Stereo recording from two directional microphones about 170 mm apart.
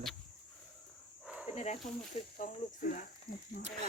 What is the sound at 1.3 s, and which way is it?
Cricket, 5° right (ahead or behind).